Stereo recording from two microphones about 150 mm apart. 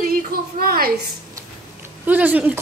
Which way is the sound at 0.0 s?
80° right.